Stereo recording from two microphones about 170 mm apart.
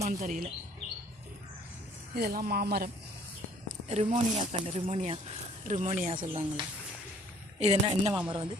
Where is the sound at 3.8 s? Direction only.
40° right (ahead or behind).